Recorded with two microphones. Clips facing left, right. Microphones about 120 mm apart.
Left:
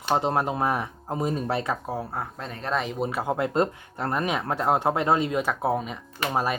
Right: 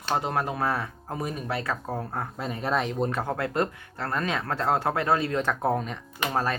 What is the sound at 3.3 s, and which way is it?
Speech, 20° left (ahead or behind).